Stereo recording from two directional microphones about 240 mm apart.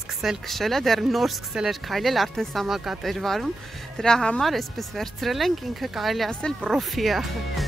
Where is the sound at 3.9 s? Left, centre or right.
Centre.